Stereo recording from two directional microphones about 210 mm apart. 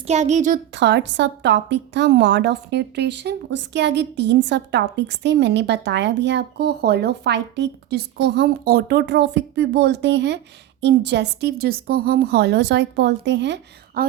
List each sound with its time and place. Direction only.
0.1 s speech: 35° right (ahead or behind)
0.7 s a woman's voice: 55° right (ahead or behind)